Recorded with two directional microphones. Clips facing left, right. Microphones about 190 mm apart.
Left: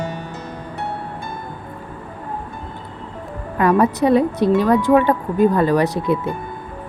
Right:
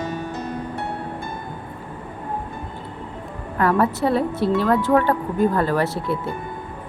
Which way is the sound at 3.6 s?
15° left (ahead or behind).